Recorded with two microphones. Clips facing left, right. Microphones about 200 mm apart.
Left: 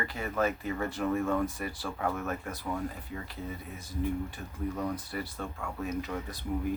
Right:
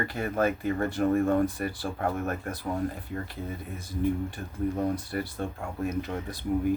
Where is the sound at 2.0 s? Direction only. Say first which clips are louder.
Right 2 dB; 45° right (ahead or behind).